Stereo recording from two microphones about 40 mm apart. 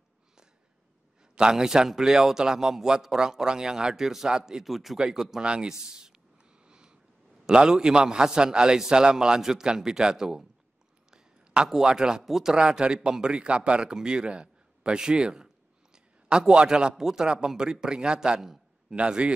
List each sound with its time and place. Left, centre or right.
1.3 s a man's voice: centre
4.6 s speech: centre
4.9 s a man's voice: centre
6.7 s a sound: right
7.4 s a man's voice: centre
11.1 s a sound: centre
12.2 s a man's voice: centre
12.5 s a man's voice: right
15.0 s a sound: right
16.9 s a man's voice: centre